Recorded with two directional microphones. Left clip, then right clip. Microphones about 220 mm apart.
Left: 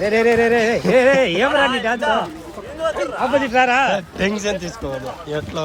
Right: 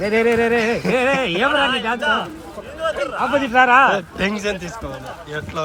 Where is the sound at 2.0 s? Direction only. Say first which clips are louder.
Left 1 dB; 45° left (ahead or behind).